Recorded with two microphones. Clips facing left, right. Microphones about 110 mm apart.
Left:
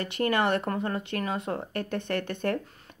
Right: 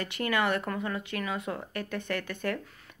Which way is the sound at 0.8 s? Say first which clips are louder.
Left 3 dB; 40° left (ahead or behind).